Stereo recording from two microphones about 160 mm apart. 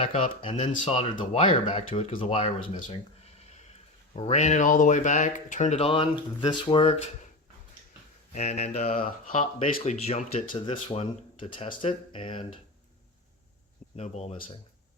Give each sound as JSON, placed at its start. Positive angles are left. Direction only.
{"t": 0.0, "sound": "speech", "side_deg": 40}
{"t": 0.6, "sound": "speech", "side_deg": 45}
{"t": 4.1, "sound": "speech", "side_deg": 45}
{"t": 8.3, "sound": "speech", "side_deg": 45}
{"t": 13.9, "sound": "speech", "side_deg": 45}